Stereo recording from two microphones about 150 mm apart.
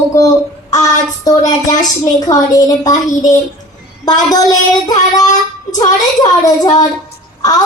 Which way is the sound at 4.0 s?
25° left (ahead or behind).